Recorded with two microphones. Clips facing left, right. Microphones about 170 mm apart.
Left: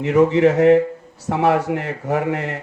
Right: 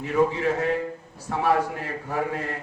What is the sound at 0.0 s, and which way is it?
Speech, 80° left.